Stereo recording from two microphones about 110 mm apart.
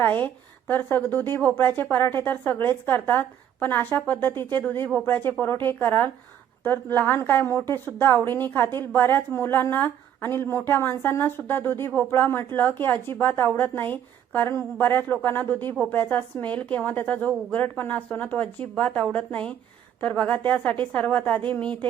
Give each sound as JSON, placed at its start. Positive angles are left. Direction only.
{"t": 0.0, "sound": "a woman's voice", "side_deg": 15}